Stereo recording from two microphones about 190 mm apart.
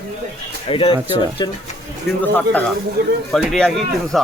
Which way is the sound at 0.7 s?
30° left (ahead or behind).